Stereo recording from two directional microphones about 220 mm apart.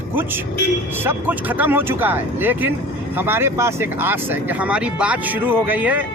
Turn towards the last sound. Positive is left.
turn(degrees=-5)  # may be behind; listen again after turning